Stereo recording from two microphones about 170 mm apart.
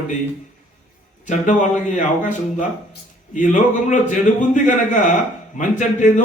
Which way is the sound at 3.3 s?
50° left (ahead or behind).